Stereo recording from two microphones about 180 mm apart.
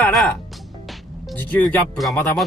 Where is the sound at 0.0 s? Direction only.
Centre (ahead or behind).